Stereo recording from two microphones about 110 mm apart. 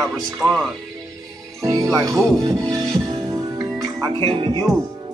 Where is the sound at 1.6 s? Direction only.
35° right (ahead or behind).